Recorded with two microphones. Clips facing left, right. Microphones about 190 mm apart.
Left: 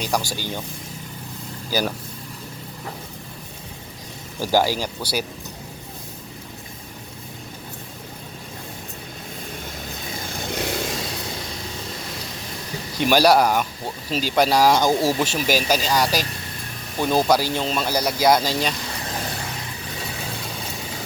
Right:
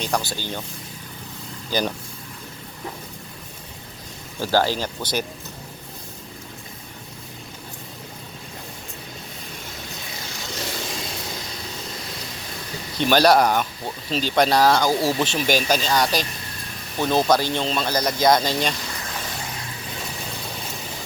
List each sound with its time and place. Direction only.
0.0 s speech: 10° left (ahead or behind)
1.7 s speech: 5° left (ahead or behind)
4.4 s speech: 10° left (ahead or behind)
10.2 s vehicle: 55° left (ahead or behind)
13.0 s speech: 10° left (ahead or behind)